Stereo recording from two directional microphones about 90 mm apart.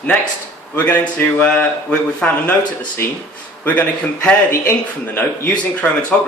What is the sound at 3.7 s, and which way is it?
Speech, 15° left (ahead or behind).